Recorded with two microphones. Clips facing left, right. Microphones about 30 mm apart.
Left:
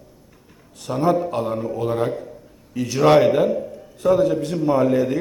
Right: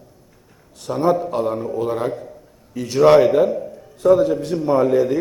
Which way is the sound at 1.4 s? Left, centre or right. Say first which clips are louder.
Right 2 dB; left.